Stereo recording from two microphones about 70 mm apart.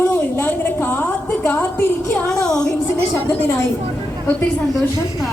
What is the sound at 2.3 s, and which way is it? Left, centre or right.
Music, centre.